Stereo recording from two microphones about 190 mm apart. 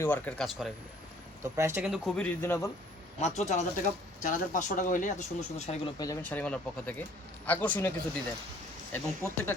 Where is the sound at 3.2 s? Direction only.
35° left (ahead or behind).